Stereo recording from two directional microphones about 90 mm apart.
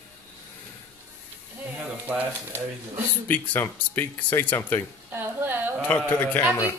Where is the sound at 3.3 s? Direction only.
20° left (ahead or behind).